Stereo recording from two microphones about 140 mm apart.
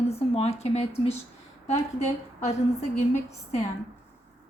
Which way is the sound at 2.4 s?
55° left (ahead or behind).